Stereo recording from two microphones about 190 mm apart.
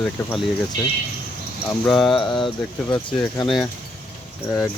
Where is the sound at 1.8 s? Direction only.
Centre (ahead or behind).